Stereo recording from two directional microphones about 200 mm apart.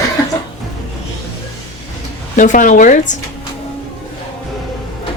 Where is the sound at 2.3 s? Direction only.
40° left (ahead or behind).